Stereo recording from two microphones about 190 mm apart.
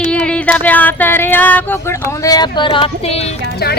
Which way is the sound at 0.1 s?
5° left (ahead or behind).